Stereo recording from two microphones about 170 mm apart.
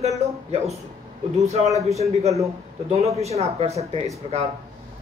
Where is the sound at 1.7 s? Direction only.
20° right (ahead or behind).